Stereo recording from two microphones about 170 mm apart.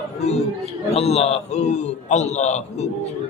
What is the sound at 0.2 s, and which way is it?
A man's voice, 40° left (ahead or behind).